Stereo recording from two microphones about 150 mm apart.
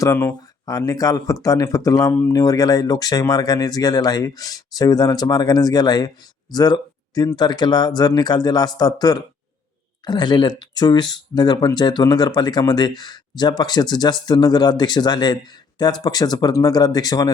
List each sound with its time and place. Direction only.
0.0 s speech: 15° left (ahead or behind)